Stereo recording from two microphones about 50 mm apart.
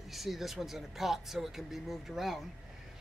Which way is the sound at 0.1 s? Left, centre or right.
Centre.